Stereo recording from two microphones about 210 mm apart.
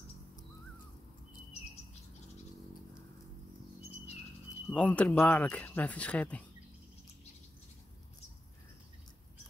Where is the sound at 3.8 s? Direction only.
30° left (ahead or behind).